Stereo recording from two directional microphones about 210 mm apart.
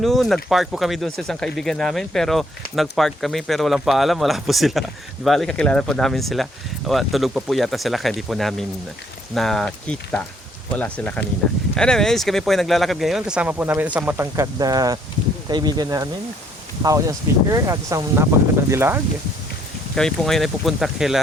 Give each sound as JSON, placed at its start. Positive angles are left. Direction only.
{"t": 0.0, "sound": "speech", "side_deg": 0}
{"t": 20.0, "sound": "speech", "side_deg": 0}